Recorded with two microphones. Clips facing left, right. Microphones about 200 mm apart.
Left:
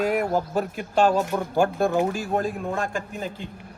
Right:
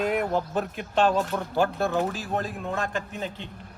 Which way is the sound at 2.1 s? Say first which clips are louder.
Left 5 dB; 50° left (ahead or behind).